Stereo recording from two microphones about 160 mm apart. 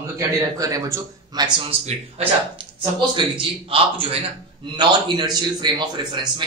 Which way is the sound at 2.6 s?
30° right (ahead or behind).